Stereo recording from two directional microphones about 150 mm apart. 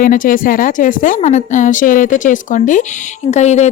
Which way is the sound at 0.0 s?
65° left (ahead or behind).